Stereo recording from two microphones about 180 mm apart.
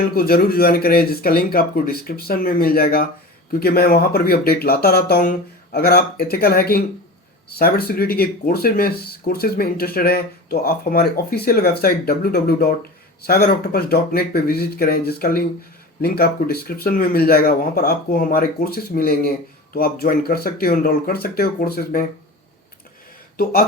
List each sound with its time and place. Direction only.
0.0 s speech: 55° left (ahead or behind)
23.4 s speech: 55° left (ahead or behind)